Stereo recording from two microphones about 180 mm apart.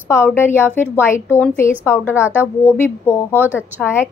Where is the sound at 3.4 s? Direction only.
10° right (ahead or behind).